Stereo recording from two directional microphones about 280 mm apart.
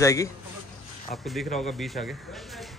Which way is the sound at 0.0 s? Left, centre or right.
Centre.